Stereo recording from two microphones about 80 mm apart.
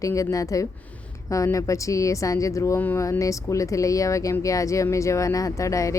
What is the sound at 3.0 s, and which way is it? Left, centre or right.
Speech, left.